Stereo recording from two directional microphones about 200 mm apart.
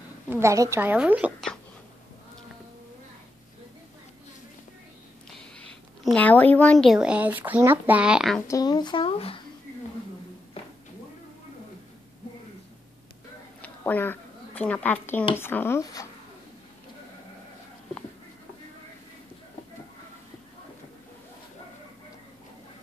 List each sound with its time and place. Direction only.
0.3 s a woman's voice: 15° right (ahead or behind)
5.6 s speech: 5° left (ahead or behind)
8.5 s speech: 20° left (ahead or behind)
13.6 s a woman's voice: 10° left (ahead or behind)